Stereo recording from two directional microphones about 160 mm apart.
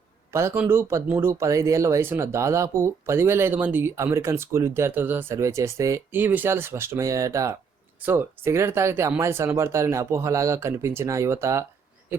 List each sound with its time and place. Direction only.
0.3 s speech: 15° right (ahead or behind)